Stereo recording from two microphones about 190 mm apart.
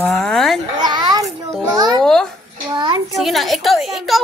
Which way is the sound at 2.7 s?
25° right (ahead or behind).